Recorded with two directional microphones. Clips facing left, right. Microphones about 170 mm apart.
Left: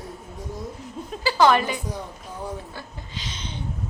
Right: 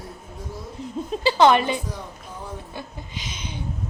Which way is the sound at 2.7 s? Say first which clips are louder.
Right 2 dB; 15° right (ahead or behind).